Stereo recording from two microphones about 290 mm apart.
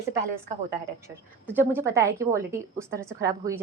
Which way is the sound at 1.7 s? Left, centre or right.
Centre.